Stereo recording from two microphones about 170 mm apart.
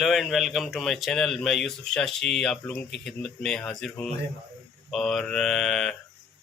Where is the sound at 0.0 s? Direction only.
Centre (ahead or behind).